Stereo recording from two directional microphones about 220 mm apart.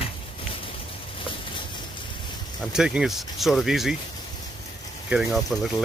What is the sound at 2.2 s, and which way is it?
Speech, centre (ahead or behind).